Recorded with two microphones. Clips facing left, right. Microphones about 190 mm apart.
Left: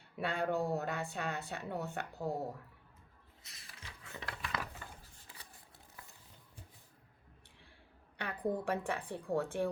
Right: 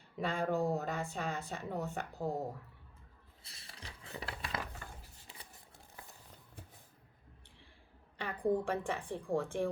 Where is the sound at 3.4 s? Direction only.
30° right (ahead or behind).